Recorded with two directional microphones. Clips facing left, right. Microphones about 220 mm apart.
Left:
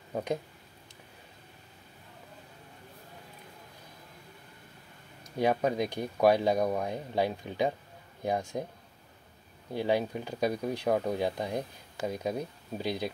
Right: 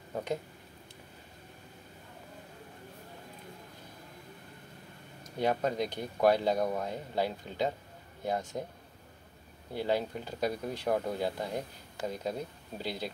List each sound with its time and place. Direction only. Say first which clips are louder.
0.1 s speech: left 2 dB; 15° left (ahead or behind)
5.4 s speech: left 3 dB; 10° left (ahead or behind)
9.8 s speech: left 3 dB; 15° left (ahead or behind)